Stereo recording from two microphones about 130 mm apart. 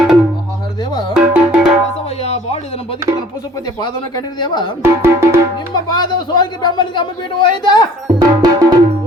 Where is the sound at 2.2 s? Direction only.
55° left (ahead or behind).